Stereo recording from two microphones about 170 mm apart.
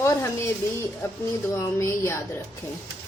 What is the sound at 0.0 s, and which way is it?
A woman's voice, 15° left (ahead or behind).